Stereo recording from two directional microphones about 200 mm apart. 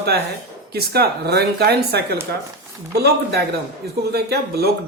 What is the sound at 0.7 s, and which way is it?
Speech, 50° right (ahead or behind).